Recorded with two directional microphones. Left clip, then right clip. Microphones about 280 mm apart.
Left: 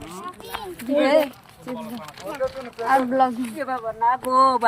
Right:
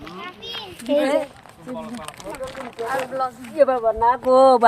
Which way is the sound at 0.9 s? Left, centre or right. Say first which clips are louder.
Left 1 dB; centre.